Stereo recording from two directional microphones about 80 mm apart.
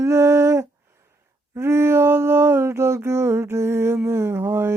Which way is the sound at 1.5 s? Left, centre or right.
Right.